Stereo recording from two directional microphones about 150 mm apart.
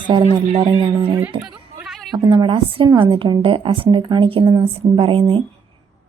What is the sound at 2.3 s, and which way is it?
A woman's voice, 30° right (ahead or behind).